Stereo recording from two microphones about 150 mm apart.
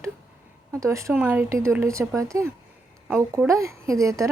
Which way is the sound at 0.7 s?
20° right (ahead or behind).